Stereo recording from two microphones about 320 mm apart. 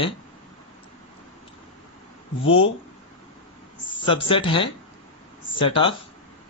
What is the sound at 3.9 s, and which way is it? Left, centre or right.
Speech, centre.